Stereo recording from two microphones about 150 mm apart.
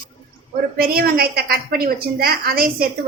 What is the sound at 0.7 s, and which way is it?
A woman's voice, 85° right.